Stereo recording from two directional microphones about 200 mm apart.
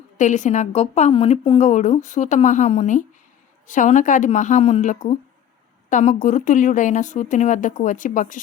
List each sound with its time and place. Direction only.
0.2 s a woman's voice: 35° left (ahead or behind)